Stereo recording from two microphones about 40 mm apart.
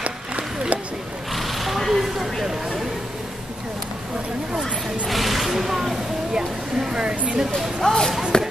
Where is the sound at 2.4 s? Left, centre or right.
Centre.